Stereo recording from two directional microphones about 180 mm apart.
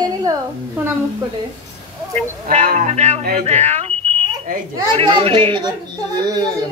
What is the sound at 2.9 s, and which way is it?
A child's voice, 40° right (ahead or behind).